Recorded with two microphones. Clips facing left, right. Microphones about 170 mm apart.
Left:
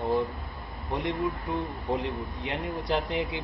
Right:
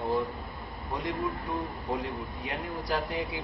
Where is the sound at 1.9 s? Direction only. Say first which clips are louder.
Left 4 dB; 20° left (ahead or behind).